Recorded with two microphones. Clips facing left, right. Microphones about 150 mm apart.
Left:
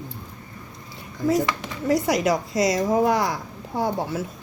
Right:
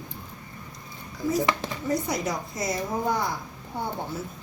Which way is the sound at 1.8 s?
90° left.